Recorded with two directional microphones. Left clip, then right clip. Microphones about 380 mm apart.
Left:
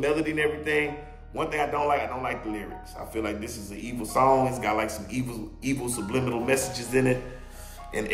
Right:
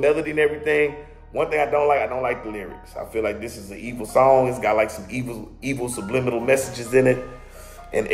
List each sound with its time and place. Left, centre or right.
0.0 s speech: centre